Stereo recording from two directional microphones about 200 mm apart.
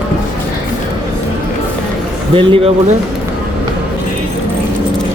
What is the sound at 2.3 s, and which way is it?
Speech, 25° right (ahead or behind).